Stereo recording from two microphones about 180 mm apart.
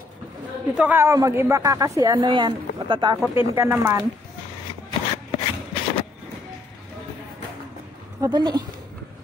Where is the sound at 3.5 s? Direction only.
15° right (ahead or behind).